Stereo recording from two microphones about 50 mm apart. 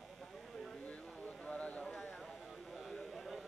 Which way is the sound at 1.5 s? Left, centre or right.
Left.